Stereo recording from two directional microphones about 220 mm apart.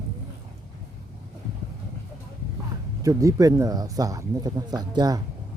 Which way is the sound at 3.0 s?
15° right (ahead or behind).